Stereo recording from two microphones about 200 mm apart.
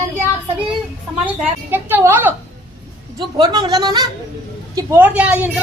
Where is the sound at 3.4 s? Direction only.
20° right (ahead or behind).